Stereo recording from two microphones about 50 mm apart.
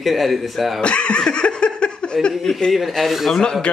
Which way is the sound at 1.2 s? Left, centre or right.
Centre.